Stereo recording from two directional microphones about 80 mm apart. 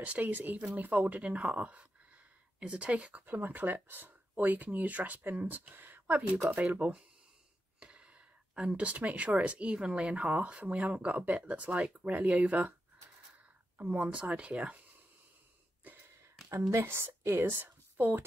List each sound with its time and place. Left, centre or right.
0.0 s speech: centre
13.7 s speech: centre
15.8 s a sound: right
16.8 s speech: right